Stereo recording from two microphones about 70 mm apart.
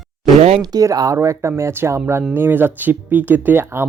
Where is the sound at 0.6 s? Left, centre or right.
Right.